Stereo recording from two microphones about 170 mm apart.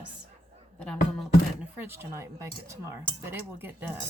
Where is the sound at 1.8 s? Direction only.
15° right (ahead or behind).